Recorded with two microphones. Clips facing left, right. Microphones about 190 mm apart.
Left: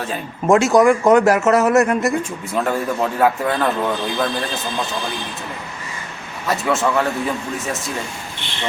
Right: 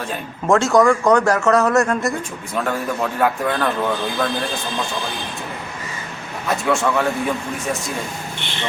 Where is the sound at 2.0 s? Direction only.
5° left (ahead or behind).